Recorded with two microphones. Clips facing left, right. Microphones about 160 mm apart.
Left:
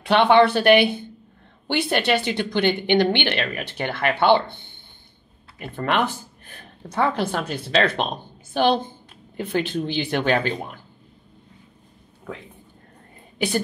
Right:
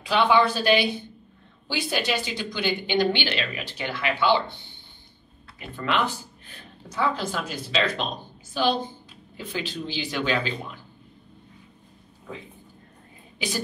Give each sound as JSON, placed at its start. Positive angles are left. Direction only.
{"t": 0.0, "sound": "speech", "side_deg": 65}
{"t": 5.8, "sound": "speech", "side_deg": 55}